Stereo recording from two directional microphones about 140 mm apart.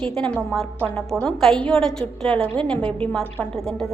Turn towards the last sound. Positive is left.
turn(degrees=0)  # may be behind; listen again after turning